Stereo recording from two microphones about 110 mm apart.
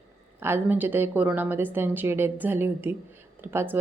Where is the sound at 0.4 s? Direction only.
20° right (ahead or behind).